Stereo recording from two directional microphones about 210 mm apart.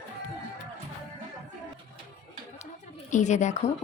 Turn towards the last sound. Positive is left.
turn(degrees=35)  # may be behind; listen again after turning